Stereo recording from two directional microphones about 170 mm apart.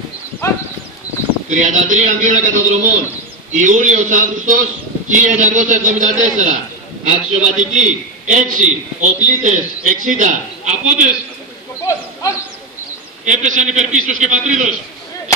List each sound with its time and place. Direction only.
1.5 s a man's voice: 45° right (ahead or behind)
11.8 s a sound: 15° left (ahead or behind)
13.2 s a man's voice: 45° right (ahead or behind)